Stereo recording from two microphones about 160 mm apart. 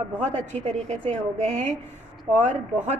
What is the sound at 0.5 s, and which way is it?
A woman's voice, 45° right (ahead or behind).